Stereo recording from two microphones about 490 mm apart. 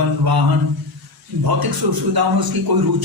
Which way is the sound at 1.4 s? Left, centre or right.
Right.